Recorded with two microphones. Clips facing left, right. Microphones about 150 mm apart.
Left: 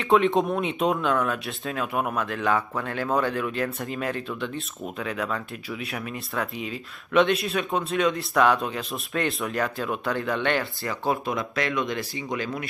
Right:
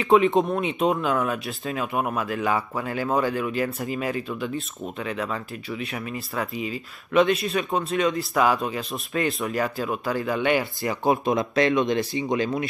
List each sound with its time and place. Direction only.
0.0 s speech: centre (ahead or behind)
10.6 s speech: 15° right (ahead or behind)